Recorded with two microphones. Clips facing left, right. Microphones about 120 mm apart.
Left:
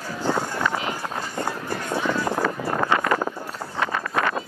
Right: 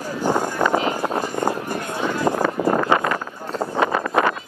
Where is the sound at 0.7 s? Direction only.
45° right (ahead or behind).